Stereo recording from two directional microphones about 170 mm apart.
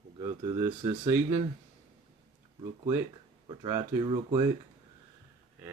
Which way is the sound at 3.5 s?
25° right (ahead or behind).